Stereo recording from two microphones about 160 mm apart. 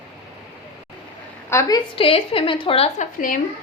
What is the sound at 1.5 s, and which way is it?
Speech, 20° left (ahead or behind).